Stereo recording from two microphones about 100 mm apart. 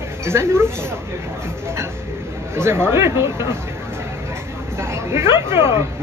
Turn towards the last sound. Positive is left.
turn(degrees=-25)  # may be behind; listen again after turning